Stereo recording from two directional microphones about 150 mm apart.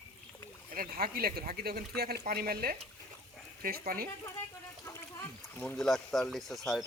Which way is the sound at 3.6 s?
80° right.